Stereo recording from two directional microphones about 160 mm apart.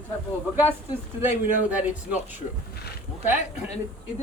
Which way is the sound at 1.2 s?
10° right (ahead or behind).